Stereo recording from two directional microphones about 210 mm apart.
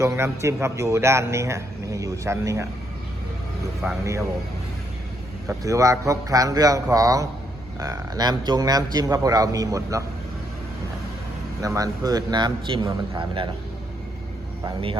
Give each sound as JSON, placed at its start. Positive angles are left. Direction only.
{"t": 0.0, "sound": "a man's voice", "side_deg": -15}
{"t": 3.8, "sound": "a man's voice", "side_deg": -10}
{"t": 5.5, "sound": "a man's voice", "side_deg": -15}
{"t": 11.6, "sound": "a man's voice", "side_deg": -15}